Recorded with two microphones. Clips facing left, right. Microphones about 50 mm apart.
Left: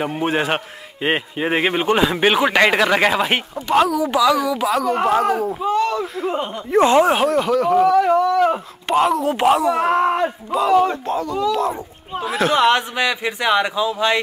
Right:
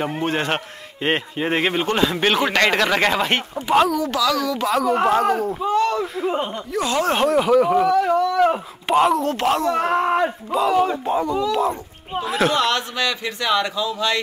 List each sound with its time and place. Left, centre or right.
0.0 s speech: centre
4.0 s speech: centre
6.7 s speech: left
7.0 s speech: centre
7.2 s speech: centre
7.9 s speech: centre
8.3 s speech: centre
9.3 s speech: centre
11.1 s speech: centre
11.3 s speech: centre
12.5 s a man's voice: left